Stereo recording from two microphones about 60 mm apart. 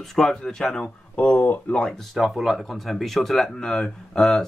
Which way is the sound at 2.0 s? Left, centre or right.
Centre.